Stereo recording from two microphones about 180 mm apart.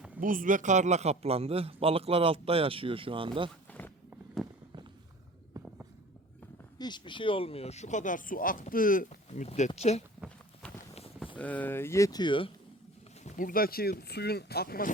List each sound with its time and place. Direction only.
0.2 s a man's voice: 50° right (ahead or behind); by 3.5 s 30° right (ahead or behind)
3.7 s a sound: 10° left (ahead or behind)
4.4 s walk: centre (ahead or behind)
5.5 s walk: 20° right (ahead or behind)
6.7 s speech: 25° left (ahead or behind)
10.2 s a sound: 5° left (ahead or behind)
11.3 s speech: 10° left (ahead or behind); by 12.5 s 25° left (ahead or behind)
13.2 s speech: 50° left (ahead or behind)